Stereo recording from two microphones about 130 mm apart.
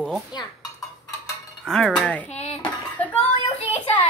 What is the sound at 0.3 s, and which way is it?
Dishes, 30° left (ahead or behind).